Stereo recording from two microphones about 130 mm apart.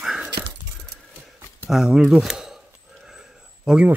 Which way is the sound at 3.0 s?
5° right (ahead or behind).